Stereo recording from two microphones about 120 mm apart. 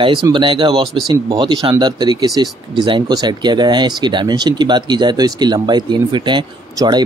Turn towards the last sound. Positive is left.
turn(degrees=-35)  # may be behind; listen again after turning